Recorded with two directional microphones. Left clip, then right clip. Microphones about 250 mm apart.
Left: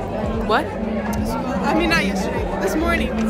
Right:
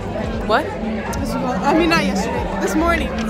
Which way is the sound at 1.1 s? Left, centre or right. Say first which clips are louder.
Right 2 dB; centre.